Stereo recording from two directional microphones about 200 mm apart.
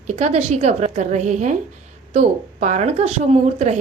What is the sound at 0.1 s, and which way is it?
Speech, 35° right (ahead or behind).